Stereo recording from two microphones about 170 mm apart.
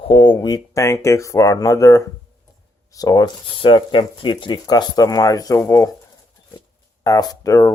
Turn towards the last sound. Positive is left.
turn(degrees=20)  # may be behind; listen again after turning